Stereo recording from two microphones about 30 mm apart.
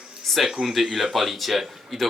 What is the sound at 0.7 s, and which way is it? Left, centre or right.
Speech, centre.